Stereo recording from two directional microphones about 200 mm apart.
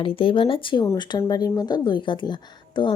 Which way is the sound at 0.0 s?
25° left (ahead or behind).